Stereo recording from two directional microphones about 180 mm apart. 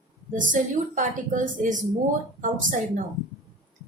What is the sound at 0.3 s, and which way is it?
A woman's voice, 45° right (ahead or behind).